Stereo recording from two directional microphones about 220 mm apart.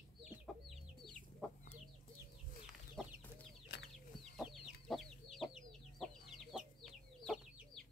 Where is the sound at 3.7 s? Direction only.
50° left (ahead or behind).